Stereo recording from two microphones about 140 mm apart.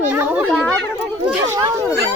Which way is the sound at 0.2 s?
10° right (ahead or behind).